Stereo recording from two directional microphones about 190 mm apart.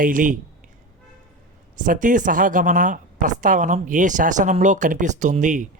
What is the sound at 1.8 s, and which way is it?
A woman's voice, 45° right (ahead or behind).